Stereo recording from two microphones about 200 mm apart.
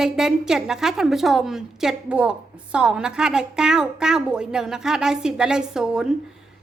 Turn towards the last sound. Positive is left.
turn(degrees=-5)  # may be behind; listen again after turning